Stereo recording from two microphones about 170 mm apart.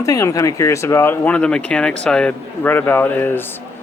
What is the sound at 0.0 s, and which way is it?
A man's voice, 20° left (ahead or behind).